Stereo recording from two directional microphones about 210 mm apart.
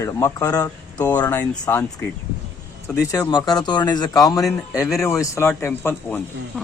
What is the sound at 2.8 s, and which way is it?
A man's voice, 15° left (ahead or behind).